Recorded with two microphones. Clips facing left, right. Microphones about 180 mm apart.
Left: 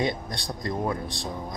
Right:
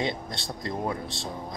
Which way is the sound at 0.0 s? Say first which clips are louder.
Left 2 dB; 25° right (ahead or behind).